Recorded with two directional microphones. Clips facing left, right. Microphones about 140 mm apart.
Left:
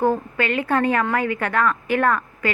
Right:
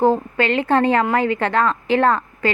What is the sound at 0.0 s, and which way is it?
A woman's voice, 25° right (ahead or behind).